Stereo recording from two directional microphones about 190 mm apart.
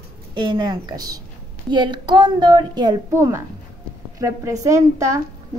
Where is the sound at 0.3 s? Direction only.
25° right (ahead or behind).